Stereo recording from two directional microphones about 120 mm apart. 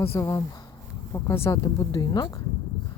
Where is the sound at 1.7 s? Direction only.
35° left (ahead or behind).